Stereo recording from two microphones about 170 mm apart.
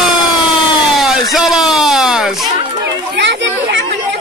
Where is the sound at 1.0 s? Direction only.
Centre (ahead or behind).